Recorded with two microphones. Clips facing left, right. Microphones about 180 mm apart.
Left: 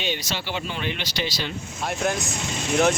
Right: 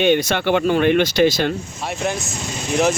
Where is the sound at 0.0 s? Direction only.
55° right (ahead or behind).